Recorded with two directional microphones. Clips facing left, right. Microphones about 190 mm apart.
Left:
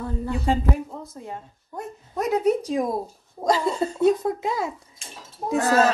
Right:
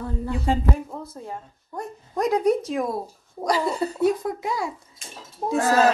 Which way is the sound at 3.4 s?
25° left (ahead or behind).